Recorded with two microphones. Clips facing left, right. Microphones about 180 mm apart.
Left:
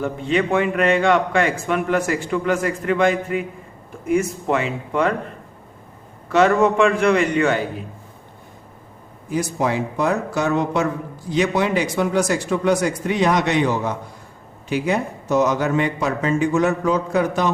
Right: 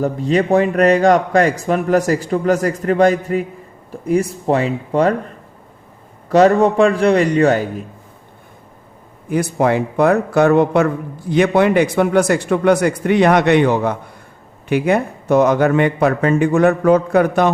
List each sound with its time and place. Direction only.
0.0 s a man's voice: 40° right (ahead or behind)
6.2 s a man's voice: 35° right (ahead or behind)
9.3 s a man's voice: 60° right (ahead or behind)